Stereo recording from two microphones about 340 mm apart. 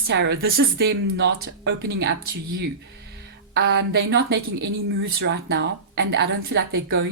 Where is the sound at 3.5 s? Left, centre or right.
Right.